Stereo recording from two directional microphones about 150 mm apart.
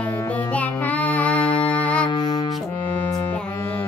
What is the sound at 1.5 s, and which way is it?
Music, 35° left (ahead or behind).